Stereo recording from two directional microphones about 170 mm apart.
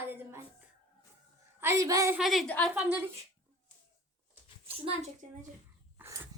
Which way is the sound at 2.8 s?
10° right (ahead or behind).